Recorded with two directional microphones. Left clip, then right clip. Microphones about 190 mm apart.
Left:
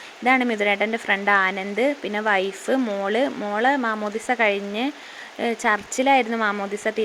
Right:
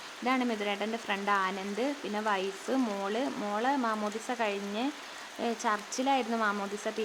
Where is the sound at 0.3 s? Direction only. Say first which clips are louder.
Left 11 dB; 20° left (ahead or behind).